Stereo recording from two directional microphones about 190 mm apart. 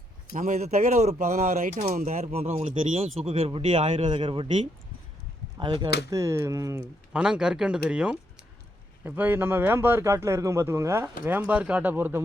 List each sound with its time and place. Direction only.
0.3 s speech: 40° right (ahead or behind); by 6.8 s 15° right (ahead or behind)
7.1 s speech: 5° right (ahead or behind)